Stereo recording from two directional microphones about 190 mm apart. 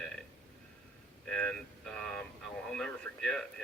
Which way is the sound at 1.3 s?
5° left (ahead or behind).